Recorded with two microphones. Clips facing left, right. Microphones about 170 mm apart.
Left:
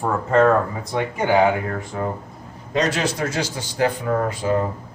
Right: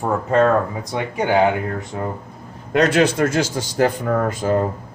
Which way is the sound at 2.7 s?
55° right (ahead or behind).